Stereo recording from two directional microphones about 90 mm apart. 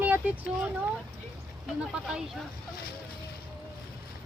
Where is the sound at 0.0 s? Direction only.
20° right (ahead or behind).